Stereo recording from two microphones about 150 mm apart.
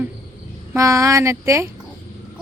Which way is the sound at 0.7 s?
20° right (ahead or behind).